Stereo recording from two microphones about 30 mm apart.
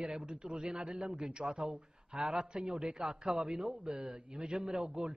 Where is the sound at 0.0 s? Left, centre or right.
Right.